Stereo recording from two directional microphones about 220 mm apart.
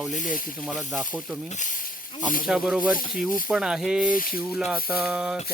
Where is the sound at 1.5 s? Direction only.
35° left (ahead or behind).